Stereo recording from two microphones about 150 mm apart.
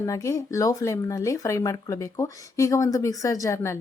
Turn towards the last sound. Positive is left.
turn(degrees=20)  # may be behind; listen again after turning